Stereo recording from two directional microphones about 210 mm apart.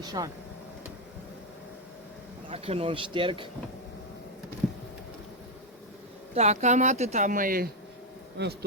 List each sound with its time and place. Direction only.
0.0 s speech: 20° right (ahead or behind)
2.5 s speech: 25° right (ahead or behind)
6.3 s speech: 35° right (ahead or behind)
8.4 s speech: 55° right (ahead or behind)